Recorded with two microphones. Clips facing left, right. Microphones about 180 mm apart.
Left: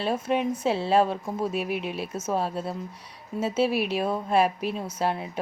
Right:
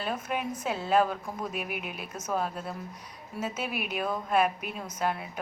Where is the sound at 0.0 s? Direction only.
30° left (ahead or behind).